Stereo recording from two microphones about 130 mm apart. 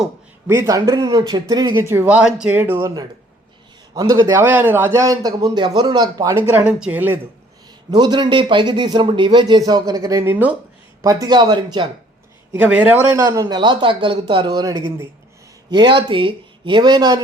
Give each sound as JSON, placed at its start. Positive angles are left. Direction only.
{"t": 0.4, "sound": "a man's voice", "side_deg": -20}
{"t": 1.7, "sound": "speech", "side_deg": -20}
{"t": 3.9, "sound": "speech", "side_deg": -30}
{"t": 4.4, "sound": "a man's voice", "side_deg": -15}
{"t": 6.5, "sound": "speech", "side_deg": -10}
{"t": 7.9, "sound": "speech", "side_deg": -30}
{"t": 11.0, "sound": "speech", "side_deg": -25}
{"t": 12.5, "sound": "a man's voice", "side_deg": -10}
{"t": 15.7, "sound": "speech", "side_deg": -35}